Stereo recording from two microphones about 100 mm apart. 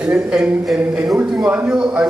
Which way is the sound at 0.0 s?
10° right (ahead or behind).